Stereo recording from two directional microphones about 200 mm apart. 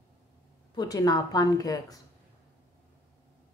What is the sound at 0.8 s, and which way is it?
A woman's voice, 20° left (ahead or behind).